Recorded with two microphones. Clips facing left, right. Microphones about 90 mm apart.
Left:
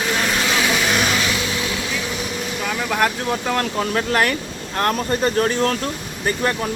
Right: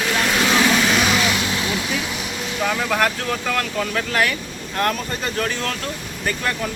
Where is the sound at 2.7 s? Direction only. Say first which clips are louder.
Left 2 dB; 5° left (ahead or behind).